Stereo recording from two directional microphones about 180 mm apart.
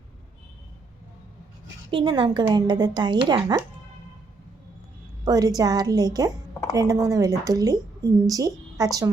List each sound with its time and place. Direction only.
1.9 s a woman's voice: 25° right (ahead or behind)
5.2 s a woman's voice: 20° right (ahead or behind)